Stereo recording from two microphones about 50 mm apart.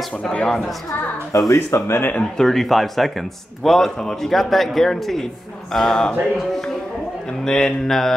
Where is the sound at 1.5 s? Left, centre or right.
Left.